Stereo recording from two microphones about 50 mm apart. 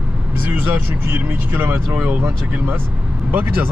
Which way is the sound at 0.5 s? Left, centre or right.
Right.